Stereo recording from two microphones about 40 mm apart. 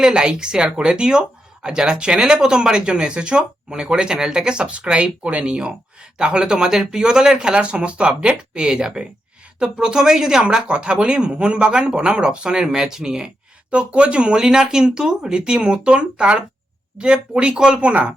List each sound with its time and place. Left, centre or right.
0.0 s speech: right
10.7 s speech: right
13.7 s speech: right
17.5 s speech: centre
17.7 s speech: right